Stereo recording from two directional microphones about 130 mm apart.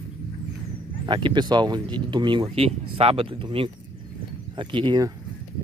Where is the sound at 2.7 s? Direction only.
50° right (ahead or behind).